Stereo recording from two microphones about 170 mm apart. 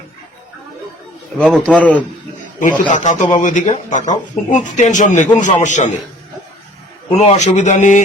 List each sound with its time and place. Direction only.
1.4 s a man's voice: centre (ahead or behind)
2.6 s speech: 50° left (ahead or behind)
7.1 s speech: 40° left (ahead or behind)